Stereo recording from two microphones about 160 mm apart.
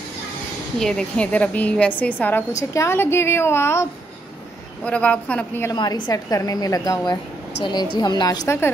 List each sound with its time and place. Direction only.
0.7 s a woman's voice: 5° left (ahead or behind)
4.8 s a woman's voice: 10° left (ahead or behind)
5.7 s a woman's voice: 25° left (ahead or behind)